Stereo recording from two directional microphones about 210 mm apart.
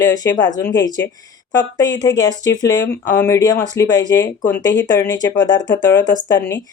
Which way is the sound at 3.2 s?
15° left (ahead or behind).